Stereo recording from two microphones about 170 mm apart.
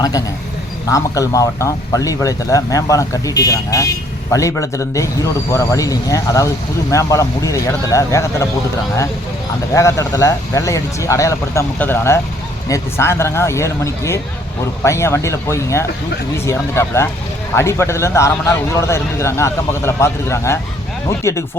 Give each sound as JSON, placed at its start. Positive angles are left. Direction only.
{"t": 0.9, "sound": "a man's voice", "side_deg": 20}
{"t": 9.7, "sound": "a man's voice", "side_deg": 20}